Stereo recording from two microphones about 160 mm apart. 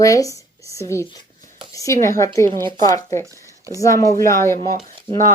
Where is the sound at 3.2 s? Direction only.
20° right (ahead or behind).